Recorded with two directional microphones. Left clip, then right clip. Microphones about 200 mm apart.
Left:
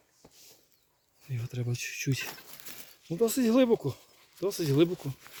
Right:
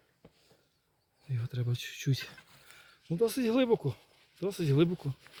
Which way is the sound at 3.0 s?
35° left (ahead or behind).